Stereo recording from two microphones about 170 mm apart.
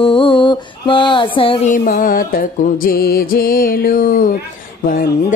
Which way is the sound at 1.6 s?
55° left (ahead or behind).